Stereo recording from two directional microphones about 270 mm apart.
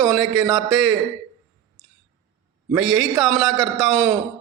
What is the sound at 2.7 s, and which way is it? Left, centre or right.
A man's voice, centre.